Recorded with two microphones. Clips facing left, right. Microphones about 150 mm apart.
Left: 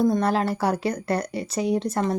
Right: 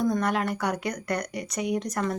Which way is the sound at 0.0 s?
30° left (ahead or behind).